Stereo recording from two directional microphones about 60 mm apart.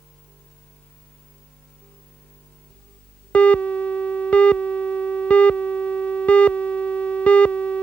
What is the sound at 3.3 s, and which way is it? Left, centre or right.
Music, left.